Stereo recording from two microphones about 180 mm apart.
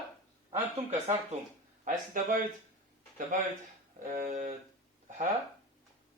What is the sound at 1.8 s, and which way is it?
Speech, 45° right (ahead or behind).